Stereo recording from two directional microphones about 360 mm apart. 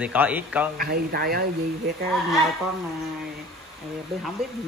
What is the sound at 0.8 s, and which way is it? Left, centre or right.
Speech, right.